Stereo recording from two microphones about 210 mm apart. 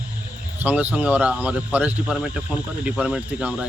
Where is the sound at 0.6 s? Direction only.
5° right (ahead or behind).